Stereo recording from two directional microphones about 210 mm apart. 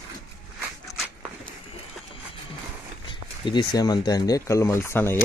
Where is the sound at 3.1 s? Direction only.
20° left (ahead or behind).